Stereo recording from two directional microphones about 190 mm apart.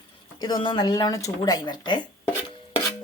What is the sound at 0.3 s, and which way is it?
Speech, 25° left (ahead or behind).